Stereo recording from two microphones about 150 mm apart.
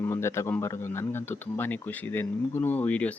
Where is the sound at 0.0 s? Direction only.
15° left (ahead or behind).